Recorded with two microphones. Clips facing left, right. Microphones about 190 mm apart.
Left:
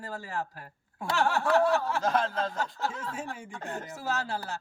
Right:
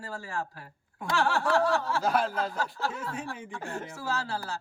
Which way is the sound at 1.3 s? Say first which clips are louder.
Left 2 dB; 20° left (ahead or behind).